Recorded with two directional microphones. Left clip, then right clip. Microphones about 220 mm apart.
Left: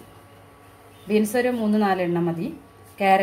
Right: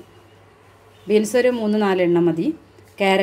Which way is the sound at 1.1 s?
35° right (ahead or behind).